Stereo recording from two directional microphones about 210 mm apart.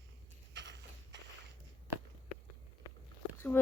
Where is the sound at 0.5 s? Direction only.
55° right (ahead or behind).